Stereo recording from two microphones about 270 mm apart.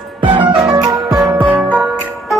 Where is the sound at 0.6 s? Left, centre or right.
Centre.